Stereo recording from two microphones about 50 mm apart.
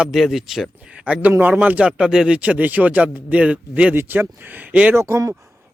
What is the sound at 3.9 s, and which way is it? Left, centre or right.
Speech, right.